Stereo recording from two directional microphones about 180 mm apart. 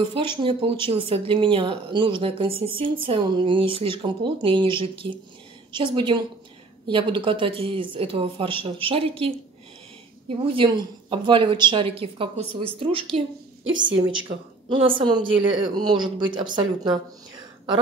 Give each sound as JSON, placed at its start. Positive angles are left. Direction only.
{"t": 0.1, "sound": "a woman's voice", "side_deg": -25}
{"t": 10.4, "sound": "a woman's voice", "side_deg": -30}
{"t": 13.7, "sound": "a woman's voice", "side_deg": -90}
{"t": 14.7, "sound": "speech", "side_deg": -30}